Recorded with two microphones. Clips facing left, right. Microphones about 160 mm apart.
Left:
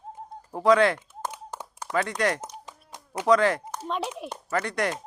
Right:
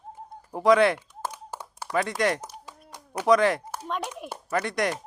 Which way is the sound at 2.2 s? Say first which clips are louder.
Right 2 dB; 15° right (ahead or behind).